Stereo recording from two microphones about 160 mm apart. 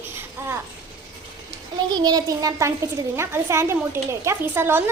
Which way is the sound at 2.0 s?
25° right (ahead or behind).